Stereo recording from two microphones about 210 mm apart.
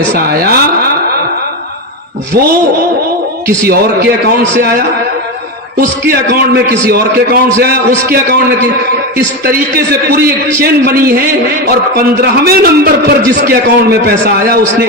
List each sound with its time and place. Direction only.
0.1 s a man's voice: 45° right (ahead or behind)
3.7 s a man's voice: 50° right (ahead or behind)